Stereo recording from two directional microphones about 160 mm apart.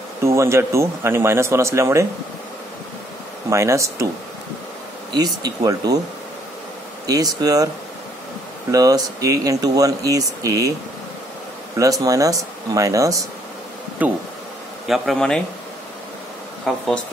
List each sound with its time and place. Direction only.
0.2 s speech: 15° right (ahead or behind)
3.4 s speech: 15° right (ahead or behind)
5.1 s speech: 25° right (ahead or behind)
7.1 s speech: 25° right (ahead or behind)
8.7 s speech: 25° right (ahead or behind)
11.8 s speech: 20° right (ahead or behind)
14.9 s speech: centre (ahead or behind)
16.6 s speech: centre (ahead or behind)